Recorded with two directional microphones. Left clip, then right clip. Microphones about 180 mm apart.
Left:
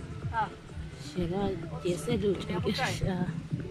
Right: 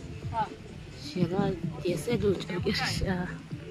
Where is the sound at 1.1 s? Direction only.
Centre (ahead or behind).